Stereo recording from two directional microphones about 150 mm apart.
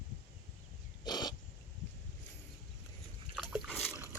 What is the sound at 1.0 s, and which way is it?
Wild animals, 30° left (ahead or behind).